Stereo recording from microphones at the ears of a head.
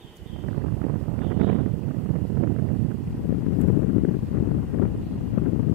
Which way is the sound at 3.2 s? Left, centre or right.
Left.